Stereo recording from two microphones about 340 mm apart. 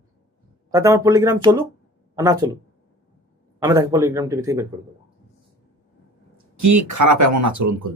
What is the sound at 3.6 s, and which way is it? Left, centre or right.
Speech, centre.